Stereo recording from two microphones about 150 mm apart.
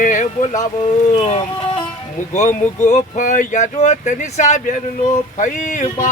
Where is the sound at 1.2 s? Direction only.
40° left (ahead or behind).